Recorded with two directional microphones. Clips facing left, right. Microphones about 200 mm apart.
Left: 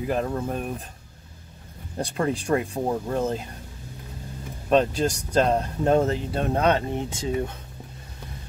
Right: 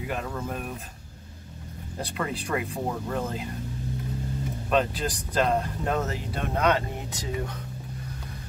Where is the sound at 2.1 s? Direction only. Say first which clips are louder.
Left 6 dB; 30° left (ahead or behind).